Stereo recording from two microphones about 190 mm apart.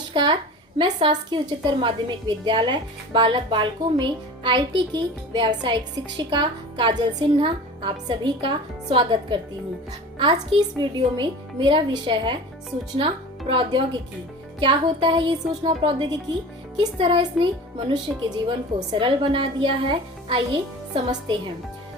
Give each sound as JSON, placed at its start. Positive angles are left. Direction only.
{"t": 0.1, "sound": "a woman's voice", "side_deg": -25}
{"t": 13.5, "sound": "a woman's voice", "side_deg": -25}